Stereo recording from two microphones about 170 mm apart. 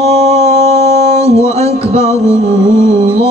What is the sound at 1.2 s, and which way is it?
Music, 15° left (ahead or behind).